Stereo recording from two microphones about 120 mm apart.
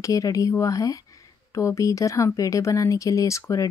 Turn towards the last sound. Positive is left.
turn(degrees=25)  # may be behind; listen again after turning